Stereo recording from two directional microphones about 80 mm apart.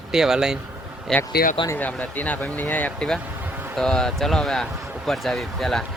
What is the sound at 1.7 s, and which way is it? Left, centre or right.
Speech, left.